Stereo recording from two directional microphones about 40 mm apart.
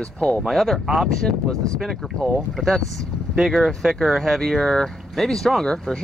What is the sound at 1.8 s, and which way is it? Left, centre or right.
Speech, centre.